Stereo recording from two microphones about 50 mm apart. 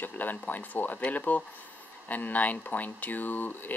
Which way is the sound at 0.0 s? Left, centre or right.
Left.